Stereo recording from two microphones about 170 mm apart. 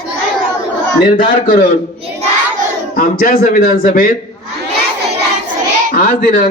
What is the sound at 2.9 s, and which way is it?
Speech, 55° left (ahead or behind).